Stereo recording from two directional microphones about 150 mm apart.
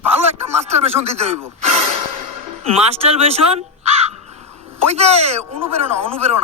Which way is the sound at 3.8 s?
45° right (ahead or behind).